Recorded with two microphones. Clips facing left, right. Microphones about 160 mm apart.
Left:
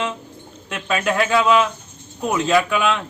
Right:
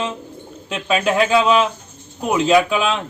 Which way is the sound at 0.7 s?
15° right (ahead or behind).